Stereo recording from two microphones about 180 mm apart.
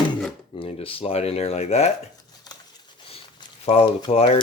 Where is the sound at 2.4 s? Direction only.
20° left (ahead or behind).